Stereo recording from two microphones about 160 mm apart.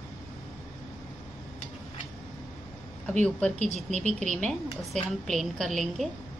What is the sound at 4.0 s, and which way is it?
Speech, 45° right (ahead or behind).